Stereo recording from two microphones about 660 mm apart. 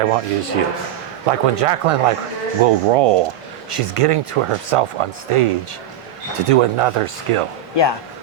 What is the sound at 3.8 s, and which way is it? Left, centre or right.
Speech, right.